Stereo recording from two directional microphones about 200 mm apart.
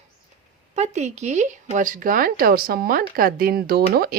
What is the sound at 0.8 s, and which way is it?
Speech, 35° right (ahead or behind).